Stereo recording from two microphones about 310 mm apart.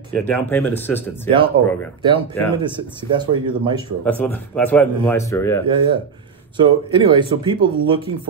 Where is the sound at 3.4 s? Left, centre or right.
Centre.